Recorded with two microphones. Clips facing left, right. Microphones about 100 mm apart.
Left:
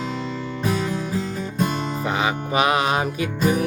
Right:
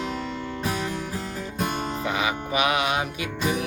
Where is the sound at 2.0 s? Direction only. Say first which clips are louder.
Left 4 dB; 35° left (ahead or behind).